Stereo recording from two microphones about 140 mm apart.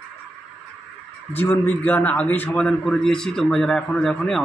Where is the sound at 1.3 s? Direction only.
15° left (ahead or behind).